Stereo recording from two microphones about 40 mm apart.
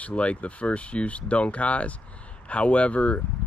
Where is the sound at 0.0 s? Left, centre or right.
Left.